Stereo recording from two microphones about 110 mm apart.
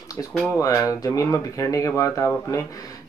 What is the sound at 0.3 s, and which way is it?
Speech, 10° left (ahead or behind).